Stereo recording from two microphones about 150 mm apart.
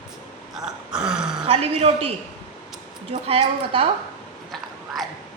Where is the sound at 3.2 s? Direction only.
40° right (ahead or behind).